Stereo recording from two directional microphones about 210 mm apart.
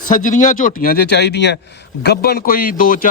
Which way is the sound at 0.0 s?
40° left (ahead or behind).